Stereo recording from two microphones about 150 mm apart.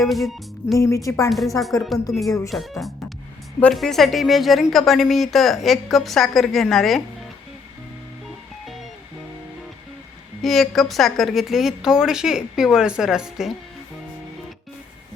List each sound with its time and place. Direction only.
0.0 s a woman's voice: centre (ahead or behind)
0.8 s speech: 20° left (ahead or behind)
1.3 s a woman's voice: centre (ahead or behind)
10.4 s a woman's voice: centre (ahead or behind)